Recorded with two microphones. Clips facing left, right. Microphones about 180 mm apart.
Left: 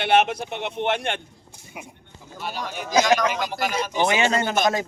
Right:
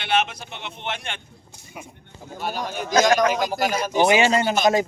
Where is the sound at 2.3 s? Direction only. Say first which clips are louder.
Right 3 dB; 45° right (ahead or behind).